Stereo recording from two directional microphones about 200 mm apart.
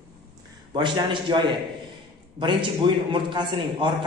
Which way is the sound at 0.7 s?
20° right (ahead or behind).